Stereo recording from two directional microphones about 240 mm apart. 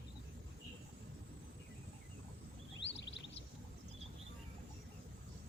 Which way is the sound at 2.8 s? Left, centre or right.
Left.